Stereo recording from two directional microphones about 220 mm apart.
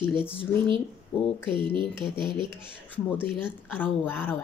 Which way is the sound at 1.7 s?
20° right (ahead or behind).